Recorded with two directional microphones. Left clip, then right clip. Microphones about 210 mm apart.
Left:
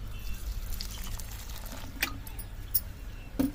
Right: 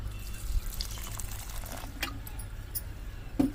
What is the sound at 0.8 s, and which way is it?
Water, 10° right (ahead or behind).